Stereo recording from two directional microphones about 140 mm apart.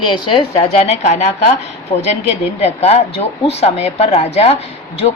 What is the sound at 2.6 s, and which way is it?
Speech, 50° left (ahead or behind).